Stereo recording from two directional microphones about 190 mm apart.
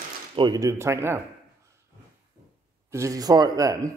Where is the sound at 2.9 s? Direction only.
15° right (ahead or behind).